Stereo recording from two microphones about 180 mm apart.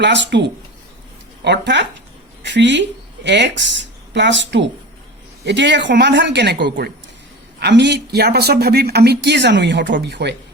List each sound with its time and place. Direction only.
0.0 s speech: 75° right (ahead or behind)
1.5 s a woman's voice: 75° right (ahead or behind)